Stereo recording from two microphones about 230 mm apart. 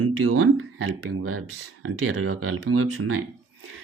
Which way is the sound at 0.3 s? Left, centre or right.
Right.